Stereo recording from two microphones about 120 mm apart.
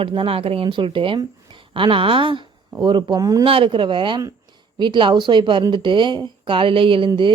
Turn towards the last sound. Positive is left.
turn(degrees=-45)  # may be behind; listen again after turning